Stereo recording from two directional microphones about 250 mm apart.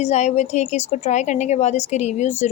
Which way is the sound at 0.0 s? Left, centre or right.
Left.